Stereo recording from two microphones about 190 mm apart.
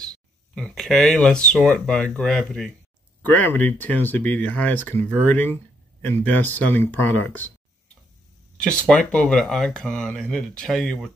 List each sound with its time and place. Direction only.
0.6 s speech: centre (ahead or behind)
8.5 s speech: 5° left (ahead or behind)